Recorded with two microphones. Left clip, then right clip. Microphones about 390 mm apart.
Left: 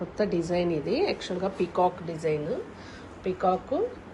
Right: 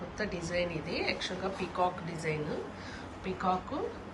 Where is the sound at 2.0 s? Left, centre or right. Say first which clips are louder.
Left 7 dB; centre.